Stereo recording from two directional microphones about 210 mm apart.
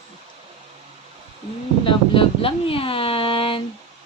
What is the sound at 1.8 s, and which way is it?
Speech, 25° left (ahead or behind).